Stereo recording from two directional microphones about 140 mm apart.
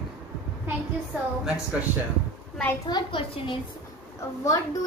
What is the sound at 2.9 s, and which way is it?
Speech, 35° left (ahead or behind).